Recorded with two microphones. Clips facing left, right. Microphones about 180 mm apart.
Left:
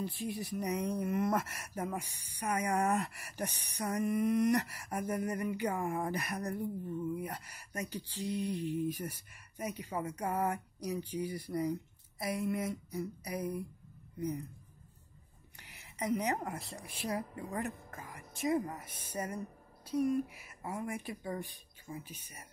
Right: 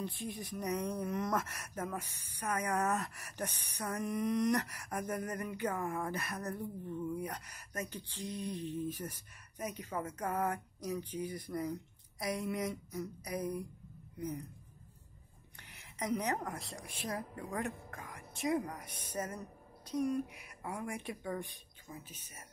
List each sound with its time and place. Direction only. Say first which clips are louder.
0.0 s a woman's voice: left 3 dB; 10° left (ahead or behind)
15.6 s a woman's voice: left 2 dB; 10° left (ahead or behind)